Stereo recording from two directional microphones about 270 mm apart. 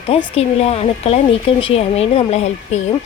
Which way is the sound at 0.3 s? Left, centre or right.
Left.